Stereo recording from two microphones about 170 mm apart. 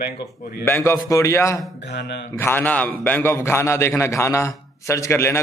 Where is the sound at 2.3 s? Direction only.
10° left (ahead or behind).